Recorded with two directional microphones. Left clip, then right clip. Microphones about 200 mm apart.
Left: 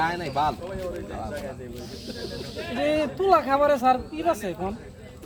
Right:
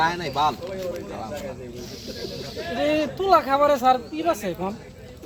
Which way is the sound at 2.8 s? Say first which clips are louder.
Right 1 dB; 5° right (ahead or behind).